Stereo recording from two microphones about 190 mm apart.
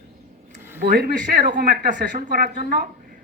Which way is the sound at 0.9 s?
50° right (ahead or behind).